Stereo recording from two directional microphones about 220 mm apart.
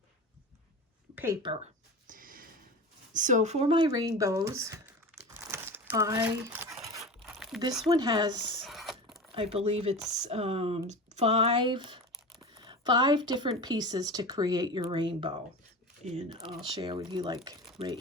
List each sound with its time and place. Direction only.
1.1 s speech: 10° right (ahead or behind)
2.0 s a sound: 40° right (ahead or behind)
3.1 s speech: 35° right (ahead or behind); by 4.9 s 10° right (ahead or behind)
5.5 s crumpling: 10° right (ahead or behind)
7.0 s crumpling: centre (ahead or behind)
7.9 s speech: 20° right (ahead or behind)
8.6 s a sound: centre (ahead or behind)
9.3 s speech: 25° right (ahead or behind)